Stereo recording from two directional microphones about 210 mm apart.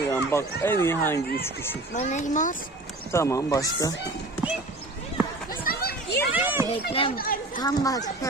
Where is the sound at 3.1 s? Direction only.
15° left (ahead or behind).